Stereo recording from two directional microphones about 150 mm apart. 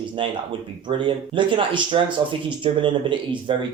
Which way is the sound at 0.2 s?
35° right (ahead or behind).